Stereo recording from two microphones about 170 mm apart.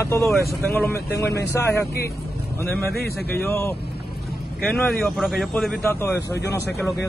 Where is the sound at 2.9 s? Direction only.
65° left (ahead or behind).